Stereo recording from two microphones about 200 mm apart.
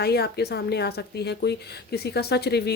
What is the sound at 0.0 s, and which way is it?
A woman's voice, 55° left (ahead or behind).